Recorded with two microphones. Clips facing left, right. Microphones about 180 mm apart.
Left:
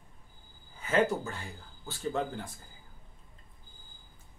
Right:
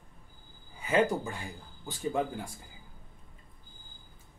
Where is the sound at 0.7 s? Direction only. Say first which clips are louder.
Right 1 dB; 10° right (ahead or behind).